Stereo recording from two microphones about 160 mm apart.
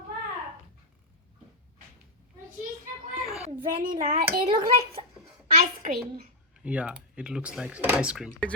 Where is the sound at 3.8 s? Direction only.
60° right (ahead or behind).